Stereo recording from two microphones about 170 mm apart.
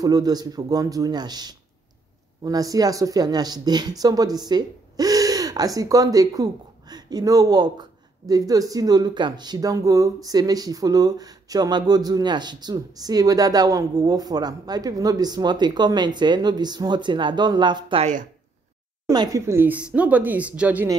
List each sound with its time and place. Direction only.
0.0 s speech: 25° right (ahead or behind)
19.0 s speech: 20° right (ahead or behind)